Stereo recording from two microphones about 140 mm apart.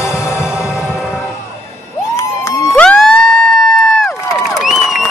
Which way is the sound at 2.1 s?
20° left (ahead or behind).